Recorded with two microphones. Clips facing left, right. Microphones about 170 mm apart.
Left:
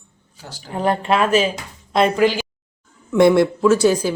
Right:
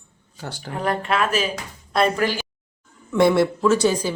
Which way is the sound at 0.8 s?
30° left (ahead or behind).